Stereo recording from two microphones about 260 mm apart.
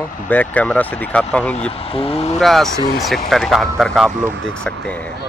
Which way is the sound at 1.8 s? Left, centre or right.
Left.